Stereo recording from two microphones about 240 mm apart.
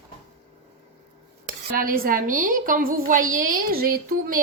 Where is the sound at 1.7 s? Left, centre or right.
Right.